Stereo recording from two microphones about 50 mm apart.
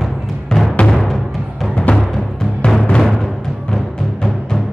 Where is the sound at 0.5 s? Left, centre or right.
Centre.